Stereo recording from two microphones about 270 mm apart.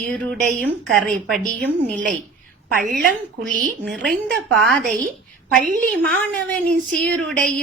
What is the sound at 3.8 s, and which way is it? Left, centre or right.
Speech, centre.